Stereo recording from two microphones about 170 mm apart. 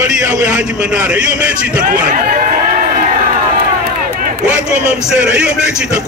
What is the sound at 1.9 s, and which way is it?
Run, 55° right (ahead or behind).